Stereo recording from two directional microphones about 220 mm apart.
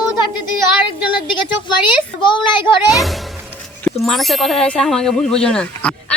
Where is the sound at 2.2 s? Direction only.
20° left (ahead or behind).